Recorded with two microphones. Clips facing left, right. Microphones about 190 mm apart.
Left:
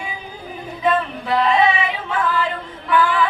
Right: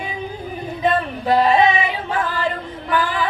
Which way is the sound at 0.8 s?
40° right (ahead or behind).